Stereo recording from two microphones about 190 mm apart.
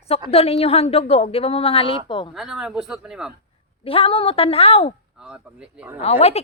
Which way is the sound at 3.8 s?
30° left (ahead or behind).